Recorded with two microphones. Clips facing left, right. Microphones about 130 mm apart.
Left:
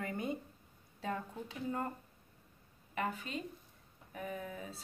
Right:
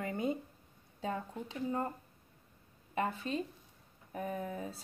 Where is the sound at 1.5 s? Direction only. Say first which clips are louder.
Right 3 dB; 20° right (ahead or behind).